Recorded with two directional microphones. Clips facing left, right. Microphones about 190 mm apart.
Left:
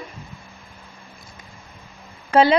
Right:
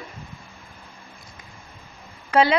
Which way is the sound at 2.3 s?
30° left (ahead or behind).